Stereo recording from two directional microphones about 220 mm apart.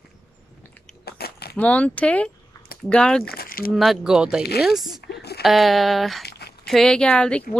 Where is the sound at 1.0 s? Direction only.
45° left (ahead or behind).